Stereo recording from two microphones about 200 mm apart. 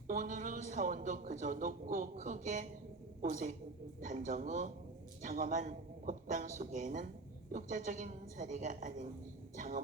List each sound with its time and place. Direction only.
0.1 s a man's voice: 40° right (ahead or behind)